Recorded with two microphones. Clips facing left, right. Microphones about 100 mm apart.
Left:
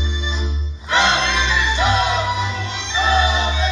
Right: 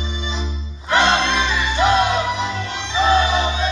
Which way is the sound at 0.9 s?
50° right (ahead or behind).